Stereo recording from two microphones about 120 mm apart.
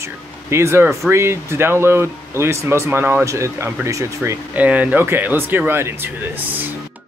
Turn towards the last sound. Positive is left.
turn(degrees=-20)  # may be behind; listen again after turning